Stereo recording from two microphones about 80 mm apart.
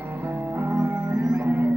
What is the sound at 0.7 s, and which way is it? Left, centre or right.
Music, right.